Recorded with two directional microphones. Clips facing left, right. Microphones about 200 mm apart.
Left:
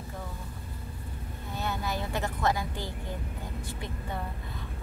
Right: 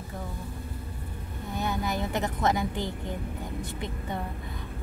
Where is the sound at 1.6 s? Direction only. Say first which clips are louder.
Right 3 dB; 15° right (ahead or behind).